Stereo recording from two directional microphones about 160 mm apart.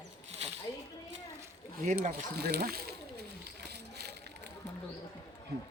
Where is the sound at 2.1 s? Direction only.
85° right.